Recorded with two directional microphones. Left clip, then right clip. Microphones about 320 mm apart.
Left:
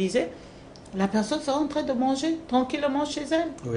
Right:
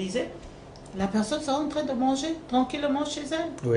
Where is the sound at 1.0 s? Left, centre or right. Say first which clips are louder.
Left 2 dB; left.